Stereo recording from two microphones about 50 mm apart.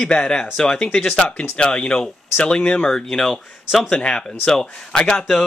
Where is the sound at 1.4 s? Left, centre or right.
Left.